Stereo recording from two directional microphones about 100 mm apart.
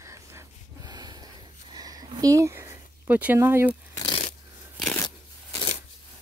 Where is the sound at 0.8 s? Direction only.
45° right (ahead or behind); by 3.3 s 15° right (ahead or behind).